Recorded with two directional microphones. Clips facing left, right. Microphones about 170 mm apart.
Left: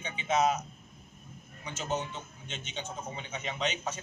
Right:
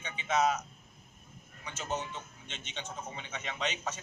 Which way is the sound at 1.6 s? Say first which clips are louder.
Left 3 dB; centre (ahead or behind).